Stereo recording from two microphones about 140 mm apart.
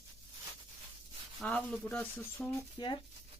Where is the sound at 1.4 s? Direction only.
Centre (ahead or behind).